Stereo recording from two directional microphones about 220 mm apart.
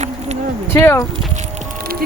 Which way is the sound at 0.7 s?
10° left (ahead or behind).